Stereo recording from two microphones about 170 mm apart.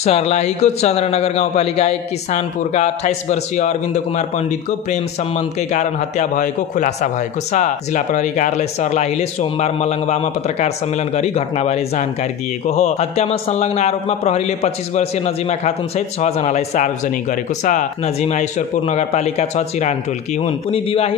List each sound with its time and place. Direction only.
0.0 s a man's voice: 40° left (ahead or behind)
5.7 s a man's voice: 45° left (ahead or behind)